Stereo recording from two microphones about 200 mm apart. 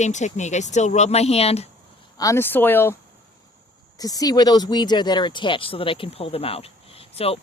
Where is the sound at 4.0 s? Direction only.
20° left (ahead or behind).